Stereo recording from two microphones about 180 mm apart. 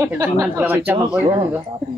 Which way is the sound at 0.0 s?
10° right (ahead or behind).